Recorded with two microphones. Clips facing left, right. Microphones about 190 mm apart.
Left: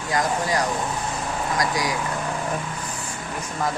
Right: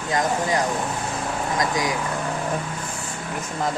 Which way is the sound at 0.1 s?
25° right (ahead or behind).